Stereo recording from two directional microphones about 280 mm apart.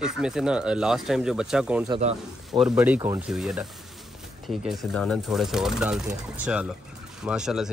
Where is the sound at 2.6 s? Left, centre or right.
Centre.